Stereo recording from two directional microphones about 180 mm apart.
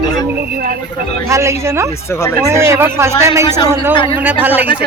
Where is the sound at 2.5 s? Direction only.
15° right (ahead or behind).